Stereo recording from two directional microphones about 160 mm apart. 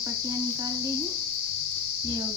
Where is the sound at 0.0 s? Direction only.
20° right (ahead or behind).